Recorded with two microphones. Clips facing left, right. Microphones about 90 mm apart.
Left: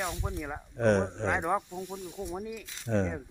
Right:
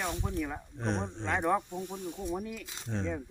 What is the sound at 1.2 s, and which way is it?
Speech, 15° left (ahead or behind).